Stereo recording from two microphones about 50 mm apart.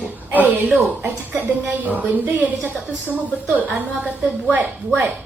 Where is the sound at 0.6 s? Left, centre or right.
Centre.